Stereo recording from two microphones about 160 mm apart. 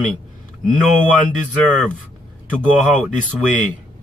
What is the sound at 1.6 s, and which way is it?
A man's voice, 5° left (ahead or behind).